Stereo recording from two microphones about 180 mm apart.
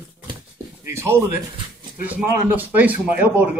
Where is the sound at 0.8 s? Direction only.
15° right (ahead or behind).